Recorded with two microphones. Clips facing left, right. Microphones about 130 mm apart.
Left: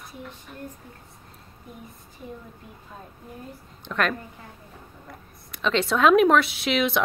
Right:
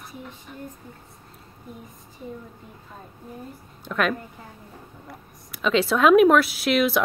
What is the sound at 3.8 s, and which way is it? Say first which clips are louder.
A woman's voice: right 2 dB; 5° right (ahead or behind).